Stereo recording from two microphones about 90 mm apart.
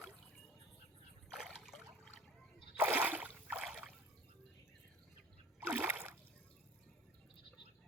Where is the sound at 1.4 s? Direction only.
5° left (ahead or behind).